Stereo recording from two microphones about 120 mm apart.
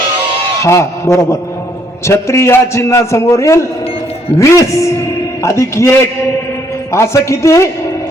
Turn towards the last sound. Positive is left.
turn(degrees=25)  # may be behind; listen again after turning